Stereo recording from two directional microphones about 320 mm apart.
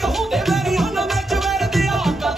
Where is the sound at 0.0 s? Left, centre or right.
Centre.